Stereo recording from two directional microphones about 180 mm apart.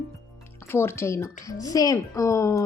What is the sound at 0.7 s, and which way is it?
Speech, 15° left (ahead or behind).